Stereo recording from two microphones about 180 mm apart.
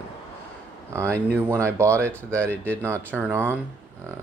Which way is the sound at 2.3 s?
10° left (ahead or behind).